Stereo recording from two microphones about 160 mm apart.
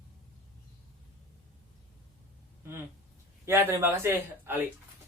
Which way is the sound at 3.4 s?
15° right (ahead or behind).